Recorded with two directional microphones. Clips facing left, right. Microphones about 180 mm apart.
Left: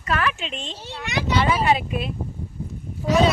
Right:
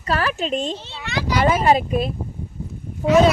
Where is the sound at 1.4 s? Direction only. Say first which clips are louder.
Right 7 dB; 40° right (ahead or behind).